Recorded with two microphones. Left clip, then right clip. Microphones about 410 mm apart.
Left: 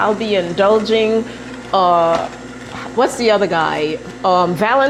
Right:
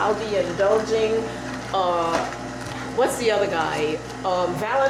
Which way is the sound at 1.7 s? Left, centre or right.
Left.